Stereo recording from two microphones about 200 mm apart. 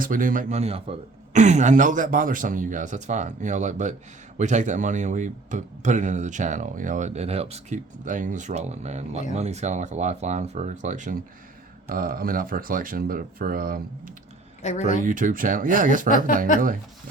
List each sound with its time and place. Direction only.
0.0 s speech: 45° right (ahead or behind)
14.6 s speech: 35° left (ahead or behind)
15.0 s speech: 40° right (ahead or behind)
16.0 s speech: 40° left (ahead or behind)